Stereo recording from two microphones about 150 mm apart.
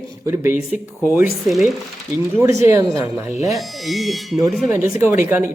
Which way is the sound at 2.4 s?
20° right (ahead or behind).